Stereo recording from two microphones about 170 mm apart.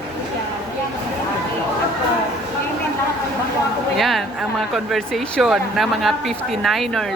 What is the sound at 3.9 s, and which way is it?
Speech, centre (ahead or behind).